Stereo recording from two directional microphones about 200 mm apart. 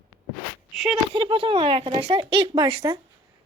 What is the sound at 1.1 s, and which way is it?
Speech, 25° right (ahead or behind).